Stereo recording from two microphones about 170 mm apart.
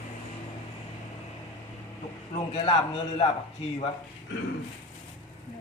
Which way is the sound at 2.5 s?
35° left (ahead or behind).